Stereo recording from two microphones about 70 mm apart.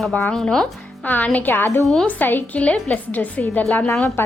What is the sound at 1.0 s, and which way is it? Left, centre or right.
A woman's voice, left.